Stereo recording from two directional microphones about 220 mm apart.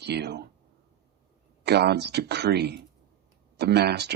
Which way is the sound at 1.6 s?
50° right (ahead or behind).